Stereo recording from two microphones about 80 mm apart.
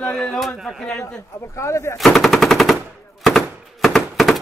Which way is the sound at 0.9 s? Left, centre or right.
Left.